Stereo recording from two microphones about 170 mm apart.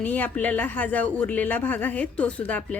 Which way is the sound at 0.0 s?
10° left (ahead or behind).